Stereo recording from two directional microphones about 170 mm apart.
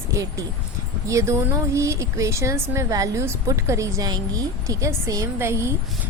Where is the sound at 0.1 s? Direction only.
20° right (ahead or behind).